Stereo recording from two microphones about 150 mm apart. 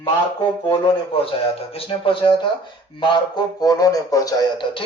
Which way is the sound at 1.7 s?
40° left (ahead or behind).